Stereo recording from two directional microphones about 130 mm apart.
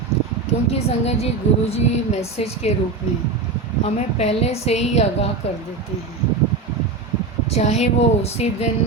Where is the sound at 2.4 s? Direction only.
55° left (ahead or behind).